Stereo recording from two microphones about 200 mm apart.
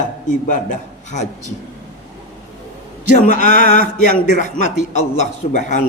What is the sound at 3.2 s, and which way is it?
A man's voice, 40° left (ahead or behind).